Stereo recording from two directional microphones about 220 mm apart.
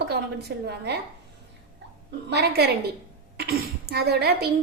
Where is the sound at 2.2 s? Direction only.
50° right (ahead or behind).